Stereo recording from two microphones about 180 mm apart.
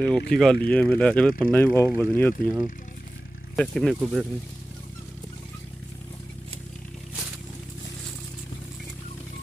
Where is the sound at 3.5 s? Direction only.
5° left (ahead or behind).